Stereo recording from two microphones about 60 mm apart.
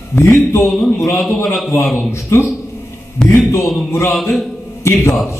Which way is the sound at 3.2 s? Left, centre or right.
Centre.